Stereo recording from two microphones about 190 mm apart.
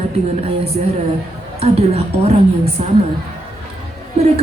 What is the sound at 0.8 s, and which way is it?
Speech, 40° right (ahead or behind).